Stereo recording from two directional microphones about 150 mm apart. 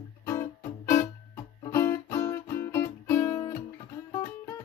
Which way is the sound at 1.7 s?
15° left (ahead or behind).